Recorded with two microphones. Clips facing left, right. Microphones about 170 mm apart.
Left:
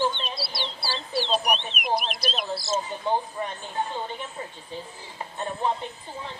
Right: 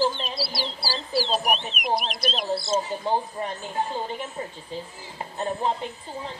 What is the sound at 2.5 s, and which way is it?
Speech, 25° right (ahead or behind).